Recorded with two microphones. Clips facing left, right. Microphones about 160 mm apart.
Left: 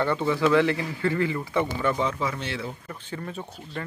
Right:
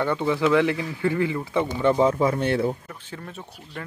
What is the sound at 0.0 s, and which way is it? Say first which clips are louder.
Speech: right 1 dB; 10° right (ahead or behind).